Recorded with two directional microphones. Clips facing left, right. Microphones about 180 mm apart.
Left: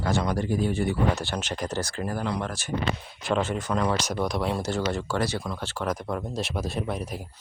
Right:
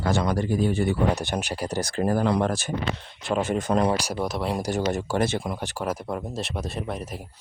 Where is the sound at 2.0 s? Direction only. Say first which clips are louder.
Right 10 dB; 50° right (ahead or behind).